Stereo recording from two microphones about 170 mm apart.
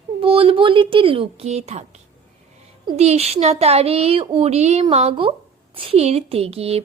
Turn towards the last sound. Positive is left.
turn(degrees=-35)  # may be behind; listen again after turning